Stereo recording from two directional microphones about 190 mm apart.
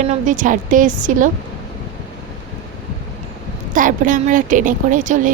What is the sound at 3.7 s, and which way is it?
A woman's voice, 45° right (ahead or behind).